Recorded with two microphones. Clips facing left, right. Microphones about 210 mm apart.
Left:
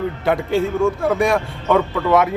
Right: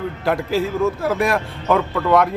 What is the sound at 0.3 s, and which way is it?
A man's voice, centre (ahead or behind).